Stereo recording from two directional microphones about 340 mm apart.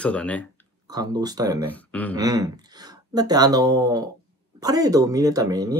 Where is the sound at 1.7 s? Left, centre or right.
Centre.